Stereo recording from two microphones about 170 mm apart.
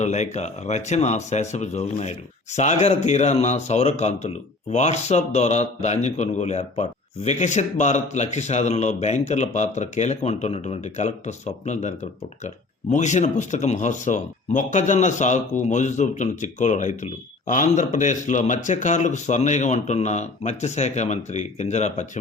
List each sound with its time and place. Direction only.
0.0 s speech: 45° left (ahead or behind)